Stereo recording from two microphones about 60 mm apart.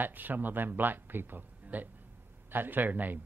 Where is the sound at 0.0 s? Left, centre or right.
Right.